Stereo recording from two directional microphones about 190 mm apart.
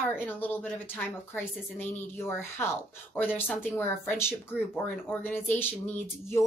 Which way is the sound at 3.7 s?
10° left (ahead or behind).